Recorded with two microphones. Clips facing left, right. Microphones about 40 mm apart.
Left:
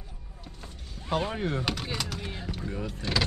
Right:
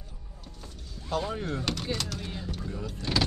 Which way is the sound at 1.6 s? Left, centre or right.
Centre.